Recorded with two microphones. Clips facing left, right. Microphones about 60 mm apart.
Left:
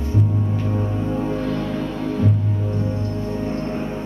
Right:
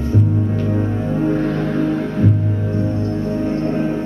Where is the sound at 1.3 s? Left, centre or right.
Right.